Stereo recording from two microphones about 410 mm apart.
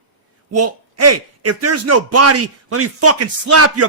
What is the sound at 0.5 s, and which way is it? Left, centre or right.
A man's voice, right.